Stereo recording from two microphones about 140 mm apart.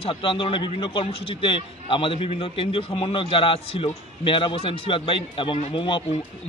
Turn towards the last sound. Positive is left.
turn(degrees=35)  # may be behind; listen again after turning